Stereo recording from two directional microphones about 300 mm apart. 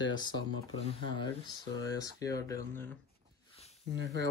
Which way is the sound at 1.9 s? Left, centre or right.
Centre.